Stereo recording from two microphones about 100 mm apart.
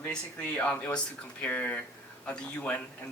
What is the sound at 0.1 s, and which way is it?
Speech, 10° left (ahead or behind).